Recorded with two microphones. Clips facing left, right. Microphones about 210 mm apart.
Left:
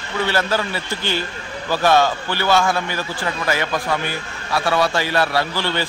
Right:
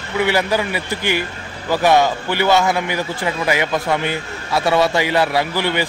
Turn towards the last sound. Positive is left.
turn(degrees=-15)  # may be behind; listen again after turning